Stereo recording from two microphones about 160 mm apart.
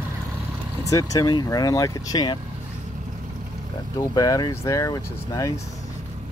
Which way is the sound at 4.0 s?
25° left (ahead or behind).